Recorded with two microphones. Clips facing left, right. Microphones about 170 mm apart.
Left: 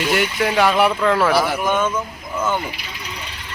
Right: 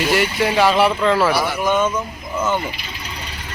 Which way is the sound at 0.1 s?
Centre (ahead or behind).